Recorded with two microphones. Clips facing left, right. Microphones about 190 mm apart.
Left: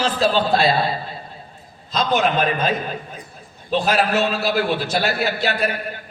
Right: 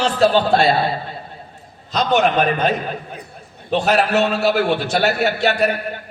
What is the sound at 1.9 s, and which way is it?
Speech, 65° right (ahead or behind).